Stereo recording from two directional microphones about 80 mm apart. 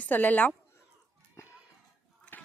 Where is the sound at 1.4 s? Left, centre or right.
Left.